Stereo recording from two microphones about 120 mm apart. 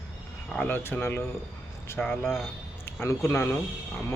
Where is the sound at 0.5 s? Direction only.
15° left (ahead or behind).